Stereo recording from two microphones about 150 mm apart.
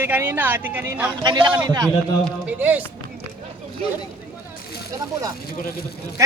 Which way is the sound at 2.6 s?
10° right (ahead or behind).